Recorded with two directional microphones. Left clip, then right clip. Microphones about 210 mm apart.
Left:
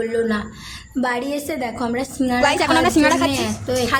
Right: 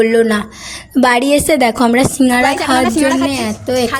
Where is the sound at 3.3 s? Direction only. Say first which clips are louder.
Right 5 dB; 30° right (ahead or behind).